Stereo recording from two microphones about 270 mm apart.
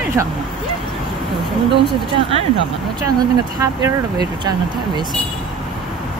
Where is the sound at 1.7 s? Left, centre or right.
Centre.